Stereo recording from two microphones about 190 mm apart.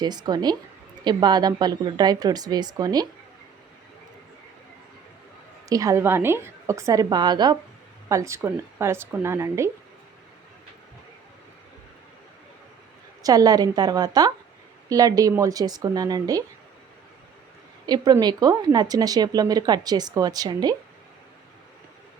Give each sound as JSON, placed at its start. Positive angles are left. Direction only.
{"t": 0.0, "sound": "speech", "side_deg": -20}
{"t": 5.6, "sound": "a woman's voice", "side_deg": -20}
{"t": 13.2, "sound": "speech", "side_deg": -20}
{"t": 17.8, "sound": "speech", "side_deg": -20}